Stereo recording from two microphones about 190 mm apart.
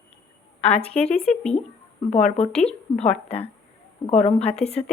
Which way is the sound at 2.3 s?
35° left (ahead or behind).